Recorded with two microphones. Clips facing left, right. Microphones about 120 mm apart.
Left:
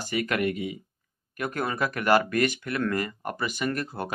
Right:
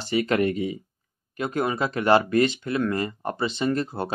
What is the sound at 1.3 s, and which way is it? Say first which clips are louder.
Speech: right 3 dB; 20° right (ahead or behind).